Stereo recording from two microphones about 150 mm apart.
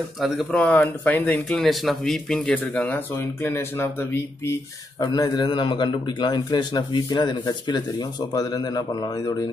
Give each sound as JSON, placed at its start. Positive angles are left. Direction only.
{"t": 0.2, "sound": "speech", "side_deg": 5}
{"t": 5.0, "sound": "a man's voice", "side_deg": 25}